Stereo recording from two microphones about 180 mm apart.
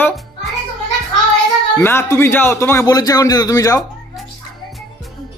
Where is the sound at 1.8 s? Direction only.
15° left (ahead or behind).